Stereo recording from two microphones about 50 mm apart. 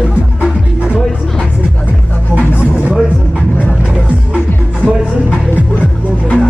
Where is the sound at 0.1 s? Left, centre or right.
Right.